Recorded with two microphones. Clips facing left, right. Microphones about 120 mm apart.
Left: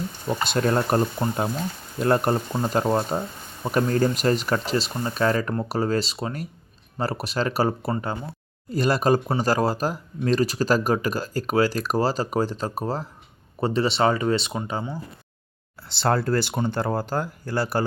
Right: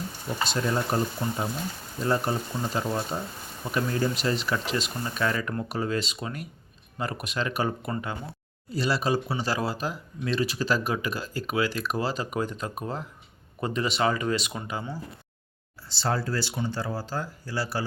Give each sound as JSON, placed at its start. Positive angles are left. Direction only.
{"t": 0.3, "sound": "speech", "side_deg": 60}
{"t": 8.7, "sound": "speech", "side_deg": 50}
{"t": 15.9, "sound": "speech", "side_deg": 60}